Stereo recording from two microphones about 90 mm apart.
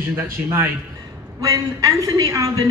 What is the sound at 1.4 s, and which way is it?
A woman's voice, 40° right (ahead or behind).